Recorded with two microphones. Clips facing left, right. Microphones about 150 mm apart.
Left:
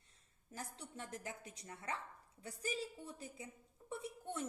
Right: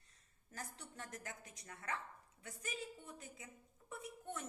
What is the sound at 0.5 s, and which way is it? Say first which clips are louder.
A woman's voice: left 2 dB; 25° left (ahead or behind).